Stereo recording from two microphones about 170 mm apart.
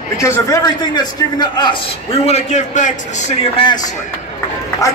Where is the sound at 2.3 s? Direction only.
40° left (ahead or behind).